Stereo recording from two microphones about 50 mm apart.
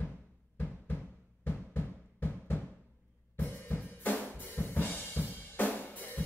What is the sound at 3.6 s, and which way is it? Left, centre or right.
Drum kit, left.